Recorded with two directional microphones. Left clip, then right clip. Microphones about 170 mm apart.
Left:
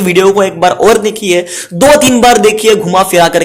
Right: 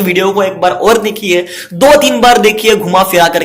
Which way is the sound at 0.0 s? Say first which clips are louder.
Left 3 dB; 50° left (ahead or behind).